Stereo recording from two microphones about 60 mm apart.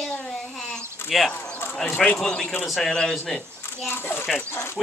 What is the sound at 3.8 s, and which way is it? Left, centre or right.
Speech, left.